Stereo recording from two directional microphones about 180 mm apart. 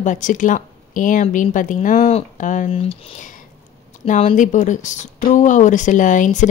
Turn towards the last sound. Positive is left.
turn(degrees=45)  # may be behind; listen again after turning